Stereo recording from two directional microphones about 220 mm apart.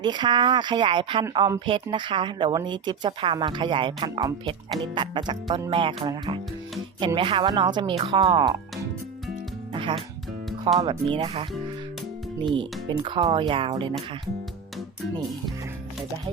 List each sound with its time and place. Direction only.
0.0 s speech: 20° right (ahead or behind)
9.7 s music: 25° right (ahead or behind)
10.8 s speech: 20° right (ahead or behind)